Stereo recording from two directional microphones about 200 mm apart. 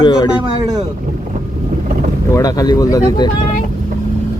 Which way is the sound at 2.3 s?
20° left (ahead or behind).